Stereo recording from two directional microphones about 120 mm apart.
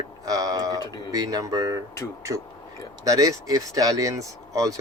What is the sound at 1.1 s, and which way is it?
Speech, 30° right (ahead or behind).